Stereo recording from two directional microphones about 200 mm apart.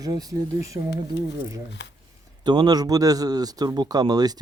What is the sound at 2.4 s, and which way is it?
Speech, 20° right (ahead or behind).